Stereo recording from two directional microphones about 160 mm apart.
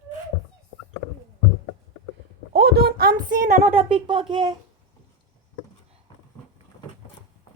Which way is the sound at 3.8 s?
35° right (ahead or behind).